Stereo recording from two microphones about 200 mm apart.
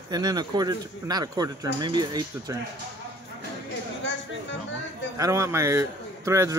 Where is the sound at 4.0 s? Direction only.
65° left (ahead or behind).